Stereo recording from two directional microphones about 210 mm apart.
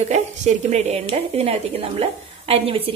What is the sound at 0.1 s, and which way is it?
A woman's voice, 35° right (ahead or behind).